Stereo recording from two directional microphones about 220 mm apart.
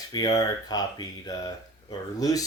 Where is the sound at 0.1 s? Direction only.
15° left (ahead or behind).